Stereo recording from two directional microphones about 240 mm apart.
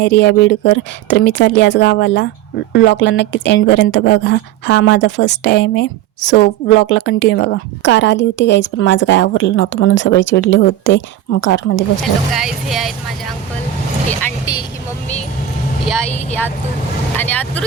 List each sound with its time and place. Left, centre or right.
0.0 s a woman's voice: left
12.3 s speech: centre
14.2 s speech: centre
17.2 s speech: centre